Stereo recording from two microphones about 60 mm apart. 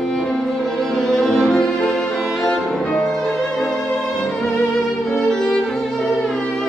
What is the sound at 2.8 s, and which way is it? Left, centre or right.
Music, centre.